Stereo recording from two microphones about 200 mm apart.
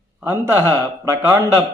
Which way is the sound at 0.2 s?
10° right (ahead or behind).